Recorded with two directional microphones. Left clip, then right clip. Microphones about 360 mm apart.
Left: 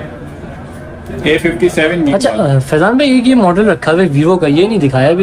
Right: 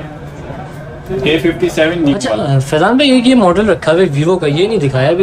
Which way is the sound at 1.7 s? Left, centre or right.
Centre.